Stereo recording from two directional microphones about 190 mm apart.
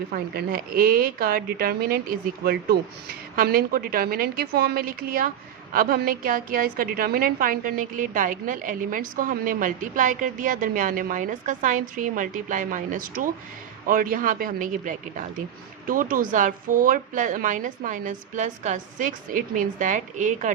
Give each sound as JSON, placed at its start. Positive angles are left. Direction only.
{"t": 0.1, "sound": "a woman's voice", "side_deg": -50}